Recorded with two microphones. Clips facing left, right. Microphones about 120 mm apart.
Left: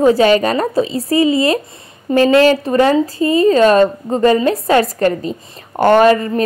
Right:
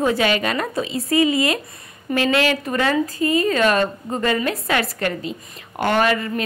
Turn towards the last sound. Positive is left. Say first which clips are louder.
# left 9 dB
turn(degrees=35)  # may be behind; listen again after turning